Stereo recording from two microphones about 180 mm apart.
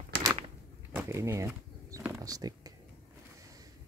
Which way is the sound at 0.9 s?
15° right (ahead or behind).